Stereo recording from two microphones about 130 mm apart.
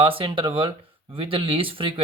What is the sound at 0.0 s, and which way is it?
Speech, 45° right (ahead or behind).